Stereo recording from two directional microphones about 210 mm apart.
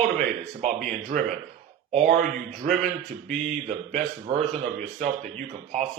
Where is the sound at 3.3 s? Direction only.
35° right (ahead or behind).